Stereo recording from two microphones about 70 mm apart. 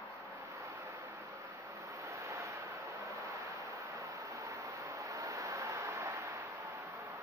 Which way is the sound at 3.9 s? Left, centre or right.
Right.